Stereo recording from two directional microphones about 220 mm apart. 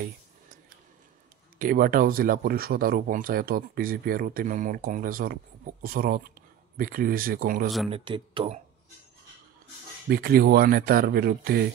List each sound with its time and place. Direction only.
1.6 s speech: 40° right (ahead or behind)
7.9 s speech: 25° right (ahead or behind)
10.0 s speech: 45° right (ahead or behind)